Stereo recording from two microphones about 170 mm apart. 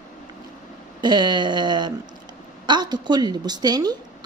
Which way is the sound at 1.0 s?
25° right (ahead or behind).